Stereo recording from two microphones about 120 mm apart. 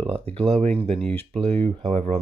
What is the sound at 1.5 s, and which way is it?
Speech, 60° right (ahead or behind).